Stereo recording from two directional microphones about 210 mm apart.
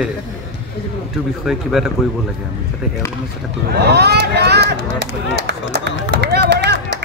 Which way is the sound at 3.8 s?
50° right (ahead or behind).